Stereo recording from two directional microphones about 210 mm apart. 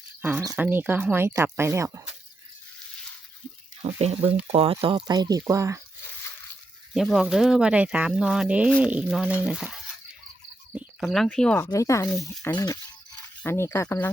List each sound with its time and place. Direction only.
0.2 s speech: 10° right (ahead or behind)
4.0 s speech: 30° right (ahead or behind)
6.9 s speech: centre (ahead or behind)